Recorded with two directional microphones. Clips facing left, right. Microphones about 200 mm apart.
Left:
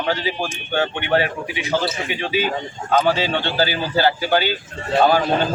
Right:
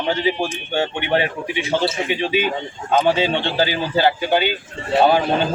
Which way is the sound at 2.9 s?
20° right (ahead or behind).